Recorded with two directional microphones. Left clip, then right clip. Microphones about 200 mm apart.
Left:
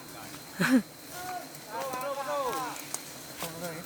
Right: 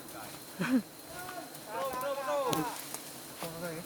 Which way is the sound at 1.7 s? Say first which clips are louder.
Even; centre (ahead or behind).